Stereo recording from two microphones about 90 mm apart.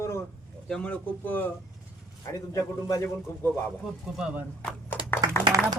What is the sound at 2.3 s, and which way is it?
Speech, 40° left (ahead or behind).